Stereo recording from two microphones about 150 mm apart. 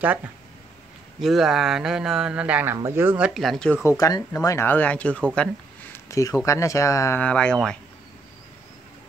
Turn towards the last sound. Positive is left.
turn(degrees=5)  # may be behind; listen again after turning